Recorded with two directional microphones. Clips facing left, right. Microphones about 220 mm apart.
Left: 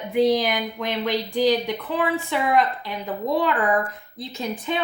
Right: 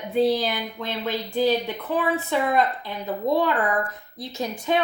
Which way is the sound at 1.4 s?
90° left.